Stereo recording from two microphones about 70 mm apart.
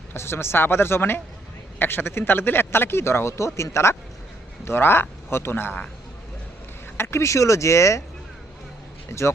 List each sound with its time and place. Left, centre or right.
0.1 s speech: left
6.9 s speech: left
9.0 s speech: left